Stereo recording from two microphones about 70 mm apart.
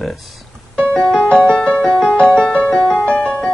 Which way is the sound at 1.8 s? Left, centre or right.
Centre.